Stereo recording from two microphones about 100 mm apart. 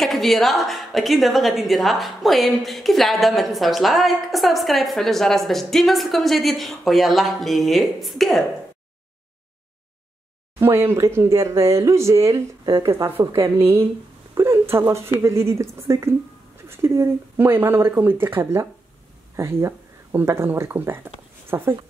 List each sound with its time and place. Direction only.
0.0 s a woman's voice: centre (ahead or behind)
10.6 s speech: 25° right (ahead or behind)
14.3 s a sound: 25° right (ahead or behind)
15.2 s speech: 30° right (ahead or behind)